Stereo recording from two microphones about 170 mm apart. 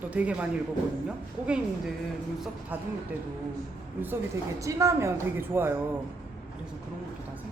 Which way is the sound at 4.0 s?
15° right (ahead or behind).